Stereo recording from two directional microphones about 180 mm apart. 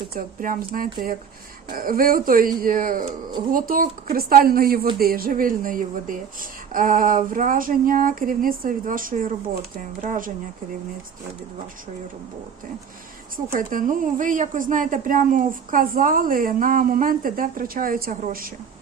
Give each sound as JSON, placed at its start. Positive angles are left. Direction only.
{"t": 0.1, "sound": "a woman's voice", "side_deg": -50}
{"t": 13.3, "sound": "a woman's voice", "side_deg": -50}